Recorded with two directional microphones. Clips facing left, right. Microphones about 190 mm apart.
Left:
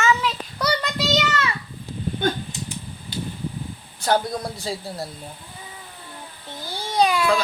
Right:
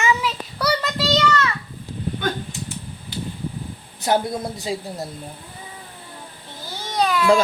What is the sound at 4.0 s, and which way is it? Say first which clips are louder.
A woman's voice: right 1 dB; 20° right (ahead or behind).